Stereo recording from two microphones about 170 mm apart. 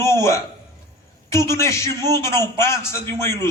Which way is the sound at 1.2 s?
15° left (ahead or behind).